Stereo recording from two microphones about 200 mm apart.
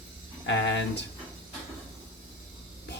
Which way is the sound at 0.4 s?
60° left (ahead or behind).